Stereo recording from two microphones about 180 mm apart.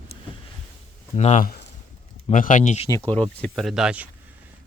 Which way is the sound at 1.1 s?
40° left (ahead or behind).